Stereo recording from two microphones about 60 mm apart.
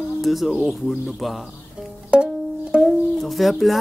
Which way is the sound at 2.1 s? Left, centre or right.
Centre.